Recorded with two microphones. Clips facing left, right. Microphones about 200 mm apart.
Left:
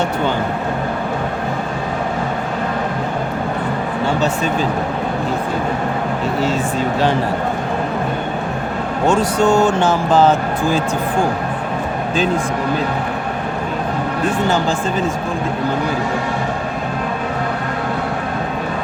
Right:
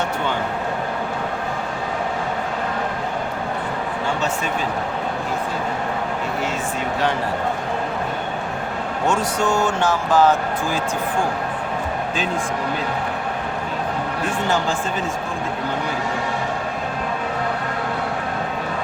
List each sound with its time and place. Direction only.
9.0 s speech: 30° left (ahead or behind)